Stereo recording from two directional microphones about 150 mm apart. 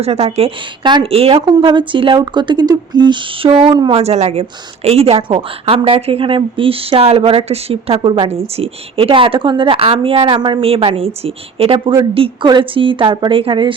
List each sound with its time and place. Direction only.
0.0 s a woman's voice: 45° right (ahead or behind)
4.0 s a woman's voice: 45° right (ahead or behind)